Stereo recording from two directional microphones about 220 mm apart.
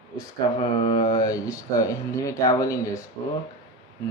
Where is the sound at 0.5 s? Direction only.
20° left (ahead or behind).